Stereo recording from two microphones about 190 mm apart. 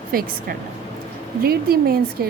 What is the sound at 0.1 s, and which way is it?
A woman's voice, 50° right (ahead or behind).